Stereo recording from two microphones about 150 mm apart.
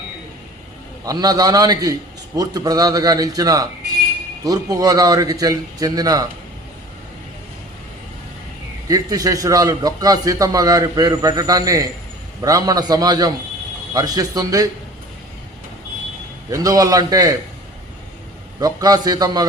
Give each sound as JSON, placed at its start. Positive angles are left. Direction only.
{"t": 1.0, "sound": "a man's voice", "side_deg": -25}
{"t": 8.9, "sound": "a man's voice", "side_deg": -25}
{"t": 16.5, "sound": "a man's voice", "side_deg": -20}
{"t": 18.6, "sound": "a man's voice", "side_deg": -25}